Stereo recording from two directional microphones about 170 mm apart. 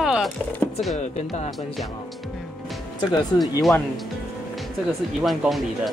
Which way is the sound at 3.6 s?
Centre (ahead or behind).